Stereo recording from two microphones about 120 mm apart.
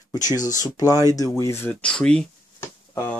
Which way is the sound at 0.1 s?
30° left (ahead or behind).